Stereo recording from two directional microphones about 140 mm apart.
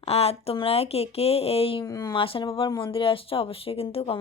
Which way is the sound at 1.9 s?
25° left (ahead or behind).